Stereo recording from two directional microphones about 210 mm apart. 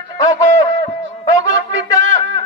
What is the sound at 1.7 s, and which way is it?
Music, 65° right (ahead or behind).